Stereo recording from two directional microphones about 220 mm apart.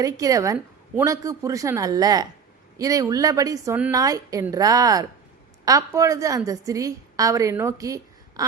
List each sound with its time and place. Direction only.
0.0 s a woman's voice: 15° right (ahead or behind)